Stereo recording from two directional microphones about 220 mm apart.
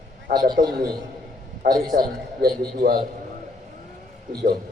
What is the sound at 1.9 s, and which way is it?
A man's voice, 40° right (ahead or behind).